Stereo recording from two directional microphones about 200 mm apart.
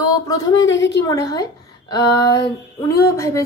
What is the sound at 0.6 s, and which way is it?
Speech, 65° left (ahead or behind).